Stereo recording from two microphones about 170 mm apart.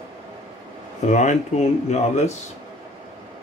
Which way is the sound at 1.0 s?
45° left (ahead or behind).